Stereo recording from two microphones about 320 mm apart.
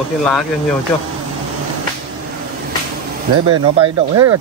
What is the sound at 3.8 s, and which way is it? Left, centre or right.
Speech, centre.